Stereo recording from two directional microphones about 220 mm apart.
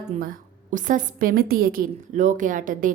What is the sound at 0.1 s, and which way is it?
A woman's voice, 40° right (ahead or behind).